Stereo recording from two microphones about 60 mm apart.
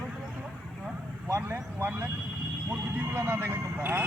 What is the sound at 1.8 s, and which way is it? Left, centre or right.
Speech, right.